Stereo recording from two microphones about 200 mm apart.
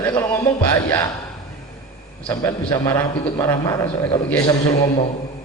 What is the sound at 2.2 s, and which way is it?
A man's voice, 15° left (ahead or behind).